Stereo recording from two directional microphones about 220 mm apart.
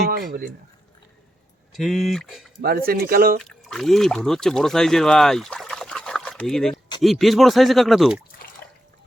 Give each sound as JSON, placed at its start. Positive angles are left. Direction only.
{"t": 0.1, "sound": "speech", "side_deg": -40}
{"t": 1.7, "sound": "speech", "side_deg": 0}
{"t": 2.6, "sound": "speech", "side_deg": -40}
{"t": 3.4, "sound": "speech", "side_deg": 0}